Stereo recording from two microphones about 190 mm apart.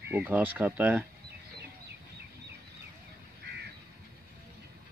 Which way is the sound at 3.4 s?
60° right (ahead or behind).